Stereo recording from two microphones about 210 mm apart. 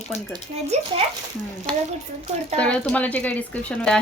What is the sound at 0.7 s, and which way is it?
Speech, 30° right (ahead or behind).